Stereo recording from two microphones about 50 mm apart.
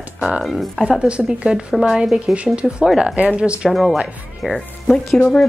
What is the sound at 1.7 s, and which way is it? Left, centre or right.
Speech, centre.